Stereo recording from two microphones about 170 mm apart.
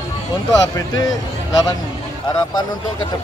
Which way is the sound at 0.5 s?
20° left (ahead or behind).